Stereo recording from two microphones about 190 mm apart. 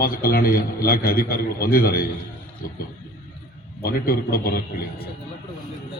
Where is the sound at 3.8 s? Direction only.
55° left (ahead or behind).